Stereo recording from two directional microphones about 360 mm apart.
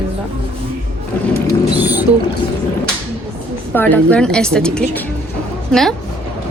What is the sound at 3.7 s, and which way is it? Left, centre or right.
Speech, centre.